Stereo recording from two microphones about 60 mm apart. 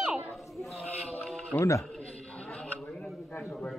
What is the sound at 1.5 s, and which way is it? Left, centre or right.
Speech, left.